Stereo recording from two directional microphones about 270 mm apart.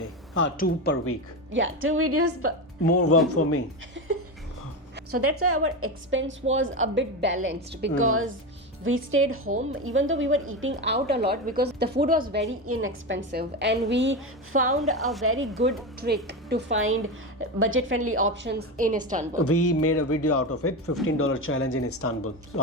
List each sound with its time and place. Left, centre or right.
0.3 s a woman's voice: left
1.5 s a woman's voice: right
2.9 s a man's voice: left
5.2 s a woman's voice: right
12.6 s a woman's voice: right
14.9 s a woman's voice: centre
15.2 s a woman's voice: right
18.8 s a woman's voice: right
19.4 s a man's voice: left